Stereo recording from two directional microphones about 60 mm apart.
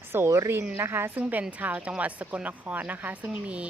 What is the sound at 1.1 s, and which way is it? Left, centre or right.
Speech, right.